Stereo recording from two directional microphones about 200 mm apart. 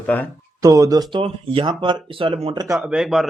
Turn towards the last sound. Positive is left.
turn(degrees=0)  # may be behind; listen again after turning